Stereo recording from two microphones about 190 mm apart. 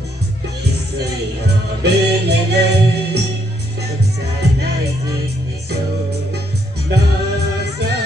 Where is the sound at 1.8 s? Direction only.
60° right (ahead or behind).